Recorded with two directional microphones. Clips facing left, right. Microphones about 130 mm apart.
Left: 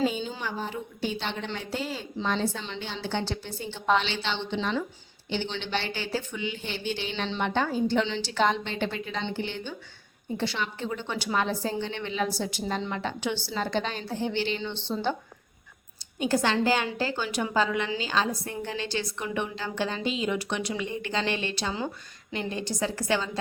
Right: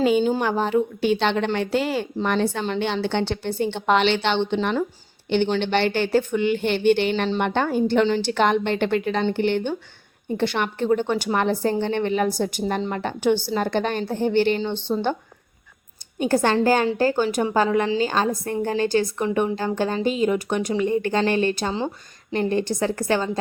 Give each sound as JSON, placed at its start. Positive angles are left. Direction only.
{"t": 0.0, "sound": "a woman's voice", "side_deg": -65}
{"t": 16.1, "sound": "a woman's voice", "side_deg": -50}